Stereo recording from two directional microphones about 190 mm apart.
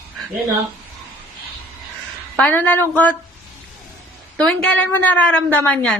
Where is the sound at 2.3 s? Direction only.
5° left (ahead or behind).